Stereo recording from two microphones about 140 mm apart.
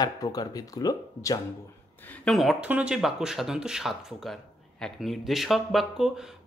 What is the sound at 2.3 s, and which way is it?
Speech, centre (ahead or behind).